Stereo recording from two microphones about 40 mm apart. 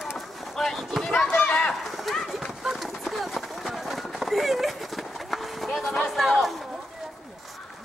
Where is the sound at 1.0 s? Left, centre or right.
Centre.